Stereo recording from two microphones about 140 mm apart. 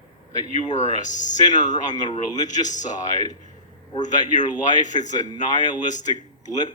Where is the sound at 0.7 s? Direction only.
55° left (ahead or behind).